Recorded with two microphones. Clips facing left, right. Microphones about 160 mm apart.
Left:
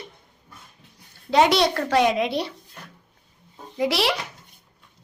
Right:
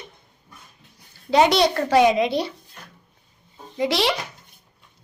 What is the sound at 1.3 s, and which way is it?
A child's voice, centre (ahead or behind).